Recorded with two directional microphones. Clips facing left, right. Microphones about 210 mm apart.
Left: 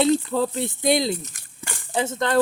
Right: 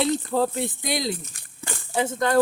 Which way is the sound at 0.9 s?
25° left (ahead or behind).